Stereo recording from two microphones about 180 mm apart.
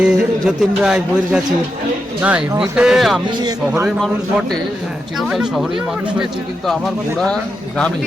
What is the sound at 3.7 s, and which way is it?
Speech, 10° right (ahead or behind).